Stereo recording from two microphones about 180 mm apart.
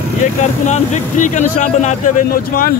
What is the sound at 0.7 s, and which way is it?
Speech, 40° left (ahead or behind).